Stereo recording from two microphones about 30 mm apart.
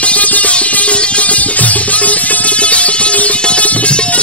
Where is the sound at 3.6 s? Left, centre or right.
Left.